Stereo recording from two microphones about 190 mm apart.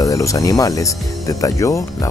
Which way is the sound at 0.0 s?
15° left (ahead or behind).